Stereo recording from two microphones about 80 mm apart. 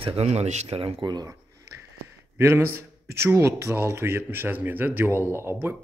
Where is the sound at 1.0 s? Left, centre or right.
Right.